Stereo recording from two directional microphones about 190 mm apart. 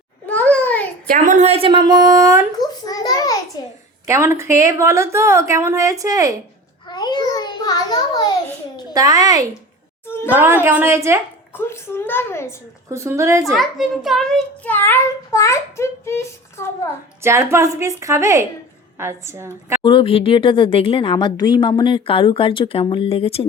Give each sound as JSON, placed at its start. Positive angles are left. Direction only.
{"t": 0.3, "sound": "a sound", "side_deg": 5}
{"t": 1.0, "sound": "a woman's voice", "side_deg": -45}
{"t": 2.6, "sound": "a sound", "side_deg": 20}
{"t": 4.0, "sound": "a woman's voice", "side_deg": -15}
{"t": 6.8, "sound": "a sound", "side_deg": 25}
{"t": 8.9, "sound": "a woman's voice", "side_deg": -20}
{"t": 11.5, "sound": "a child's voice", "side_deg": 10}
{"t": 12.9, "sound": "a woman's voice", "side_deg": -15}
{"t": 13.4, "sound": "a child's voice", "side_deg": 0}
{"t": 17.2, "sound": "a woman's voice", "side_deg": -15}
{"t": 19.8, "sound": "speech", "side_deg": 25}